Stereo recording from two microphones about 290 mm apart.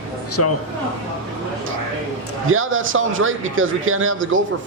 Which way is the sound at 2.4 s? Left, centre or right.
Right.